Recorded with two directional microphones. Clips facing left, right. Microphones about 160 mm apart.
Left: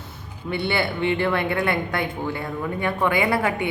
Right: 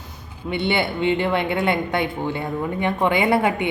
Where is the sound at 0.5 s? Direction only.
20° right (ahead or behind).